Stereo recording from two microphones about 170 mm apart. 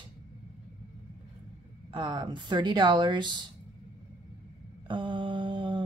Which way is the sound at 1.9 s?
25° right (ahead or behind).